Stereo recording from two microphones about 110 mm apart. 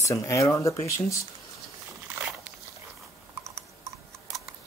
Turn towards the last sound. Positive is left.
turn(degrees=-25)  # may be behind; listen again after turning